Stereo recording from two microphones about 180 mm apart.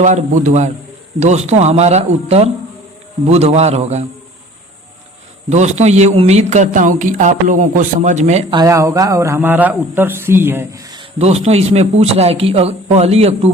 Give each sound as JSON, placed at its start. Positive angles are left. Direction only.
{"t": 0.0, "sound": "a man's voice", "side_deg": -40}
{"t": 5.5, "sound": "a man's voice", "side_deg": -40}
{"t": 8.5, "sound": "speech", "side_deg": -15}
{"t": 11.2, "sound": "a man's voice", "side_deg": -35}